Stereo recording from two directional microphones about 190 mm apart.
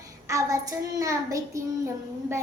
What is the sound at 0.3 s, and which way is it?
Child singing, 15° right (ahead or behind).